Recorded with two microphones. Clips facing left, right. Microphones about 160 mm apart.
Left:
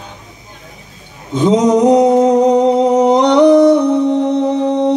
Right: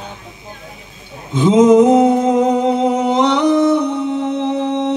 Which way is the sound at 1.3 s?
40° left (ahead or behind).